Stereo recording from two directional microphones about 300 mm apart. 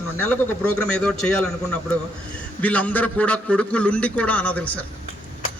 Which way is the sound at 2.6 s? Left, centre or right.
Centre.